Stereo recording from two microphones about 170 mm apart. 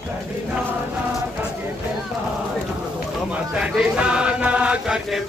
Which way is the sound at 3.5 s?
5° right (ahead or behind).